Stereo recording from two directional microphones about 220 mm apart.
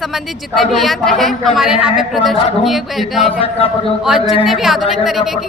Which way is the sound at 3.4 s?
25° left (ahead or behind).